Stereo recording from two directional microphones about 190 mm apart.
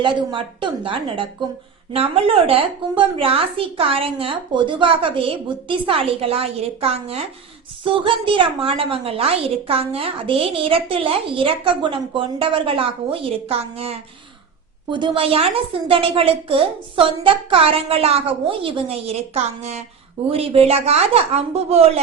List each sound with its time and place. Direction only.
0.0 s a woman's voice: 25° right (ahead or behind)